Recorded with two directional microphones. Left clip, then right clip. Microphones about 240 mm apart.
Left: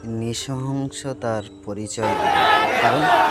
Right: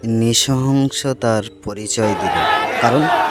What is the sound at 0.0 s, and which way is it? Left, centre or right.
Speech, right.